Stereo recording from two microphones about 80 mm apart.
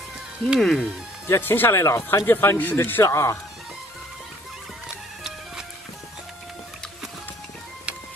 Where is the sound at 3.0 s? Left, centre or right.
Left.